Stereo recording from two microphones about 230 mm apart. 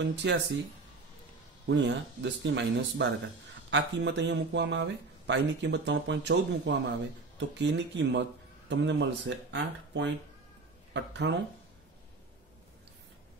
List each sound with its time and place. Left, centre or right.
0.0 s speech: right
1.7 s speech: right